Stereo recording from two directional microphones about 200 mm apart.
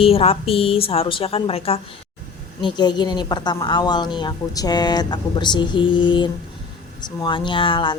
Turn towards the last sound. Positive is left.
turn(degrees=25)  # may be behind; listen again after turning